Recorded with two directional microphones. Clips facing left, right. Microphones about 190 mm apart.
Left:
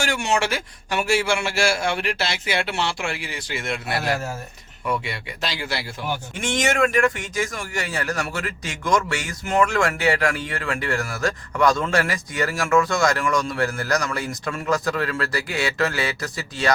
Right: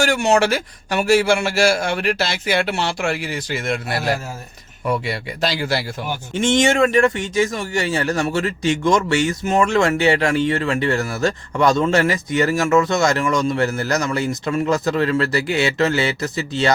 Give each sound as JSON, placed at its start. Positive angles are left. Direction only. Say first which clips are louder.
{"t": 0.0, "sound": "a man's voice", "louder": "right 7 dB", "side_deg": -40}
{"t": 6.3, "sound": "a man's voice", "louder": "right 8 dB", "side_deg": -25}